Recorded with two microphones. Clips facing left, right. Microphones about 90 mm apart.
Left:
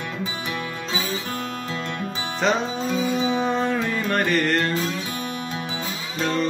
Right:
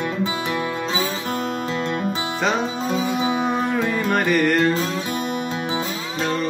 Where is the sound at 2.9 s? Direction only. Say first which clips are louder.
Even; 15° right (ahead or behind).